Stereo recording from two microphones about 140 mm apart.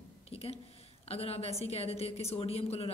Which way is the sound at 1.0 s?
45° left (ahead or behind).